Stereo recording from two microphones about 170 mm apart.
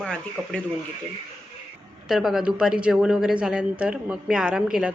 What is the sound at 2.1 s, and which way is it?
Speech, centre (ahead or behind).